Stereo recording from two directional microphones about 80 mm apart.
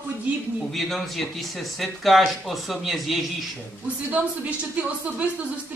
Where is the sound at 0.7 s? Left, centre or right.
Centre.